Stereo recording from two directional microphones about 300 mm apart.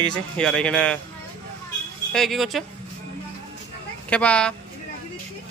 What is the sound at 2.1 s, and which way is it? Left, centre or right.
Speech, centre.